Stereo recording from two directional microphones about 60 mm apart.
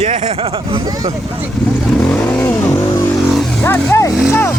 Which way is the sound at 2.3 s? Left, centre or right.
Left.